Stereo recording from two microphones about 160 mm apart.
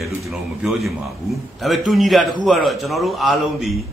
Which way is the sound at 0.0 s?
Centre (ahead or behind).